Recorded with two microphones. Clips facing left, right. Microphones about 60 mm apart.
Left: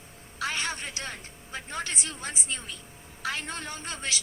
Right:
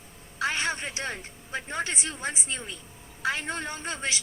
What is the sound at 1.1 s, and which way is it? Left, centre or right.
A woman's voice, right.